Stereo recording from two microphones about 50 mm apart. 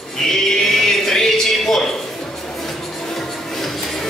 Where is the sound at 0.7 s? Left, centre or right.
Centre.